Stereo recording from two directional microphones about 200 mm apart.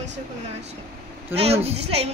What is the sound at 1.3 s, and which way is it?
Speech, 30° right (ahead or behind).